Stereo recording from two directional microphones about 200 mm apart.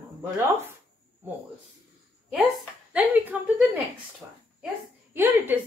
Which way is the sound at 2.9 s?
5° right (ahead or behind).